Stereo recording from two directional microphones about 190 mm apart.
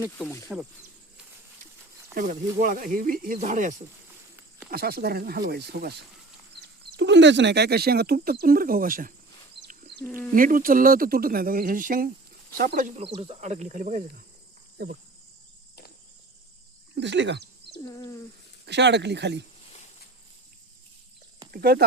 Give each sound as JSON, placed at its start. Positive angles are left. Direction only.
{"t": 0.2, "sound": "speech", "side_deg": 10}
{"t": 2.1, "sound": "speech", "side_deg": -45}
{"t": 4.7, "sound": "speech", "side_deg": -55}
{"t": 9.6, "sound": "chicken", "side_deg": -55}
{"t": 10.2, "sound": "speech", "side_deg": -45}
{"t": 16.9, "sound": "speech", "side_deg": -70}
{"t": 17.7, "sound": "a sound", "side_deg": 20}
{"t": 18.6, "sound": "speech", "side_deg": -65}
{"t": 21.5, "sound": "speech", "side_deg": -55}